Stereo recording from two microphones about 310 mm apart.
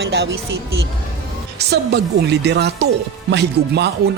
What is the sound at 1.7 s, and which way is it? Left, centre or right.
Speech, right.